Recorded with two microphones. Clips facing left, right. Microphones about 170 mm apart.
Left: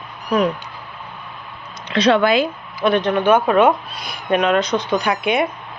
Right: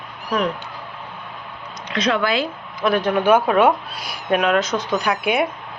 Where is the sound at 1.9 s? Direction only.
30° left (ahead or behind).